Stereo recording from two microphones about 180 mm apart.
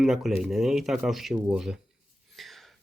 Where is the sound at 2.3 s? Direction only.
Centre (ahead or behind).